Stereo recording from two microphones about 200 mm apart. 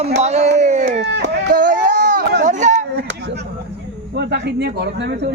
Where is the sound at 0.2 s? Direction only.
35° right (ahead or behind).